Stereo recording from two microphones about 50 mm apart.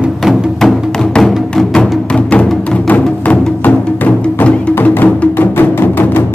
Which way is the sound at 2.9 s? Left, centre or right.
Left.